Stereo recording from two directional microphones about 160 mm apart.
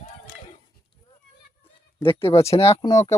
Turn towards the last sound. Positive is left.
turn(degrees=20)  # may be behind; listen again after turning